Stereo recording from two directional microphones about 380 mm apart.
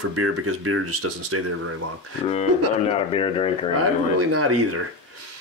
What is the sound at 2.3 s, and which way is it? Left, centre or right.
Speech, centre.